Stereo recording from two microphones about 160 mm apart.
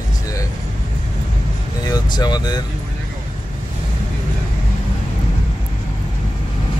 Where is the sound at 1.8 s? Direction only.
25° left (ahead or behind).